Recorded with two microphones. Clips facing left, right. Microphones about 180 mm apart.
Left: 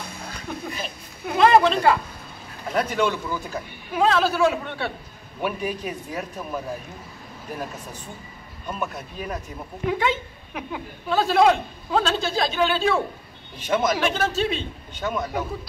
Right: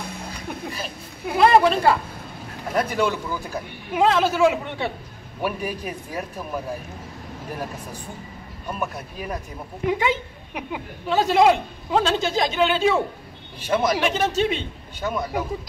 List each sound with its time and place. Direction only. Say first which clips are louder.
0.5 s a woman's voice: even; 10° right (ahead or behind)
8.6 s a woman's voice: right 1 dB; 10° right (ahead or behind)